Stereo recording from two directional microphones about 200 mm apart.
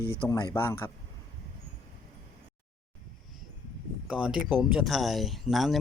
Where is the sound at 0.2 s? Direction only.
15° left (ahead or behind).